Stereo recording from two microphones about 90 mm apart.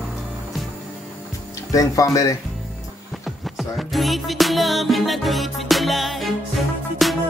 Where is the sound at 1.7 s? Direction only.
40° left (ahead or behind).